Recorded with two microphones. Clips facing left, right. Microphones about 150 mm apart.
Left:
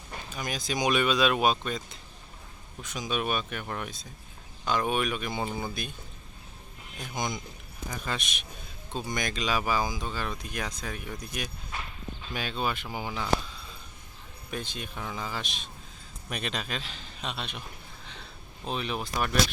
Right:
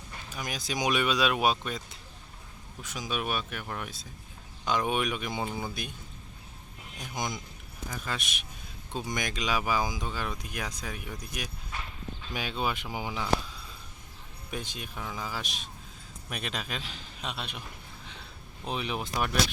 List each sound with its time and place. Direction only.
0.3 s speech: 10° right (ahead or behind)
7.0 s a man's voice: 10° right (ahead or behind)
18.0 s a sound: 10° right (ahead or behind)